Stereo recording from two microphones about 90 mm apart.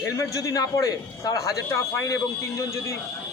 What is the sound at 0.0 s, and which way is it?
A man's voice, 35° left (ahead or behind).